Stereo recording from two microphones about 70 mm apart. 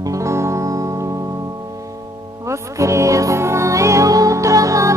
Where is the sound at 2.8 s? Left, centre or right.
Right.